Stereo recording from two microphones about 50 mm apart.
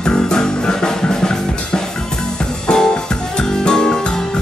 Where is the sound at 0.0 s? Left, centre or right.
Centre.